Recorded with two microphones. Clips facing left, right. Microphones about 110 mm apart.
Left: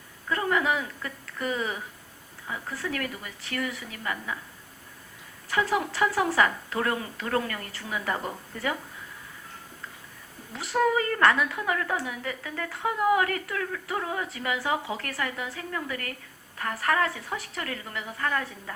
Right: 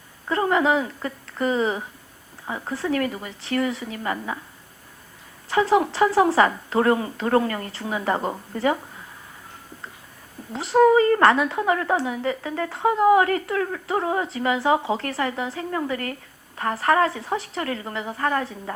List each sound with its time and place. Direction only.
0.3 s speech: 30° right (ahead or behind)
5.5 s speech: 30° right (ahead or behind)
10.5 s speech: 30° right (ahead or behind)